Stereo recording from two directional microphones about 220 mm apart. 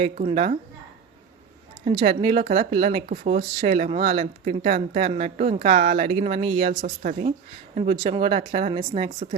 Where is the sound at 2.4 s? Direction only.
40° right (ahead or behind).